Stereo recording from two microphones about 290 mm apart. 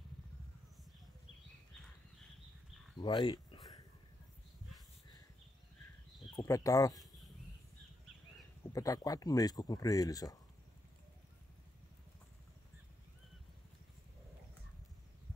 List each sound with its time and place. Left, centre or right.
3.0 s a sound: centre
6.3 s speech: centre
8.7 s speech: centre